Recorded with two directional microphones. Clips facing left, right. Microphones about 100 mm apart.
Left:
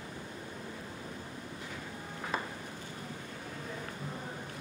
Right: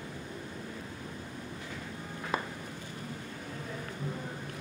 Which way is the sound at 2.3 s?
5° right (ahead or behind).